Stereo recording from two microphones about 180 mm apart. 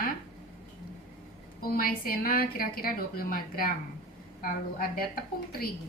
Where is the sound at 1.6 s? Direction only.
55° left (ahead or behind).